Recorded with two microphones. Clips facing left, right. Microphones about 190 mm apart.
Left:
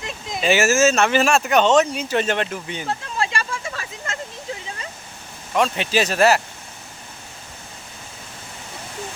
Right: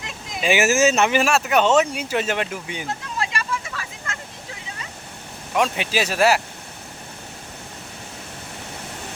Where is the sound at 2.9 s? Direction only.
30° left (ahead or behind).